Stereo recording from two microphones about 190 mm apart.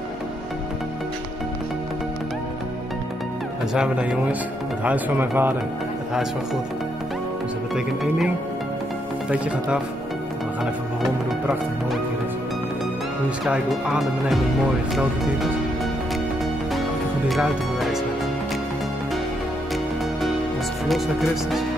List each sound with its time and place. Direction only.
3.7 s speech: 5° right (ahead or behind)
7.7 s speech: centre (ahead or behind)
13.5 s speech: 5° right (ahead or behind)
17.3 s speech: centre (ahead or behind)
20.9 s speech: centre (ahead or behind)